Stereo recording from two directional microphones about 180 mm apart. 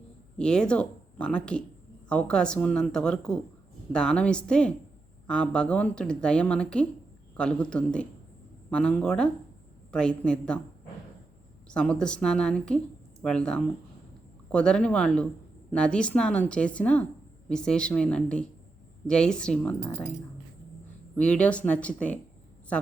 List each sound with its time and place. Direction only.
0.3 s speech: 5° left (ahead or behind)
11.7 s a woman's voice: 5° left (ahead or behind)
21.2 s a woman's voice: 5° left (ahead or behind)